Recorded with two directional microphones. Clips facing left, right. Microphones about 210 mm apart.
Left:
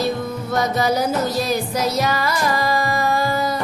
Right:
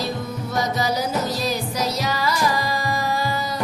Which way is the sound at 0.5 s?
55° left (ahead or behind).